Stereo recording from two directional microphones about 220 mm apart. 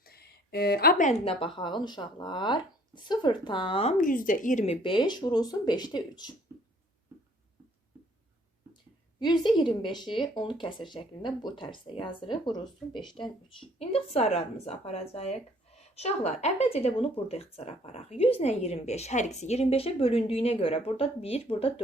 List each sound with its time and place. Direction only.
0.0 s speech: 45° left (ahead or behind); by 6.3 s 20° left (ahead or behind)
9.1 s a woman's voice: 20° left (ahead or behind)